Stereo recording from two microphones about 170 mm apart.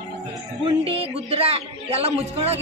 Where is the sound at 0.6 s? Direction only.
35° right (ahead or behind).